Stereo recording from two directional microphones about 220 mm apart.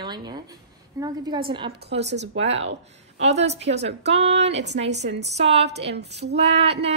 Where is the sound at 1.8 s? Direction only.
50° right (ahead or behind).